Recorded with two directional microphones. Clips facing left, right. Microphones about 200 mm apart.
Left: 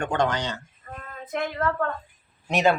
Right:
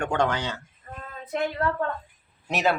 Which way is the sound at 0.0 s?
10° right (ahead or behind).